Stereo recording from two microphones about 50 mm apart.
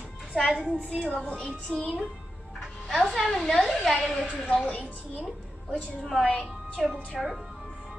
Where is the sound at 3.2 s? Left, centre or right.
Centre.